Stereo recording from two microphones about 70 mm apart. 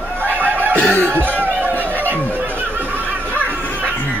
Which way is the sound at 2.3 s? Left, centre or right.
Right.